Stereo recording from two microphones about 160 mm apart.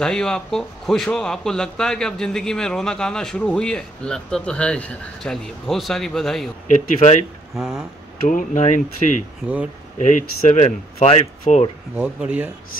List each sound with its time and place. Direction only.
0.0 s speech: 5° left (ahead or behind)
6.7 s speech: 45° left (ahead or behind)
7.5 s speech: 5° right (ahead or behind)
8.3 s speech: 50° left (ahead or behind)
9.4 s speech: 5° right (ahead or behind)
9.9 s speech: 50° left (ahead or behind)
11.9 s speech: 5° right (ahead or behind)